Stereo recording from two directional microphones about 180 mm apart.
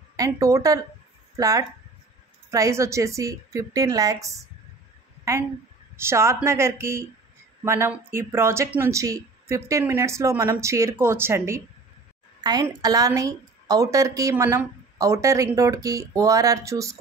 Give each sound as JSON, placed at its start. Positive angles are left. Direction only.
{"t": 0.1, "sound": "a woman's voice", "side_deg": -20}
{"t": 5.9, "sound": "a woman's voice", "side_deg": -15}